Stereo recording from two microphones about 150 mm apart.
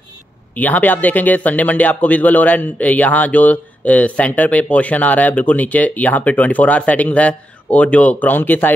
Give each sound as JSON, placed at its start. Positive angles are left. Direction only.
{"t": 0.6, "sound": "a man's voice", "side_deg": 10}